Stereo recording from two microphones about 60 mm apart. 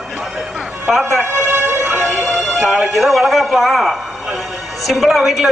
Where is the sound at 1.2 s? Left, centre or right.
Right.